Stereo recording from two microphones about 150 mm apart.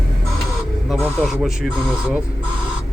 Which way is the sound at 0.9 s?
Centre (ahead or behind).